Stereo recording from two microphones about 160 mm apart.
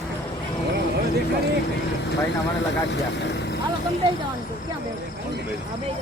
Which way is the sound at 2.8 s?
90° left.